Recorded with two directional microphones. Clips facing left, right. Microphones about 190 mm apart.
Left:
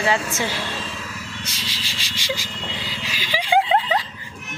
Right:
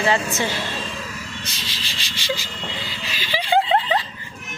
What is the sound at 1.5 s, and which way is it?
Vehicle, 10° left (ahead or behind).